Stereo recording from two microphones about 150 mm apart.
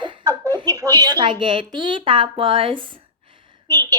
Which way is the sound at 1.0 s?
30° right (ahead or behind).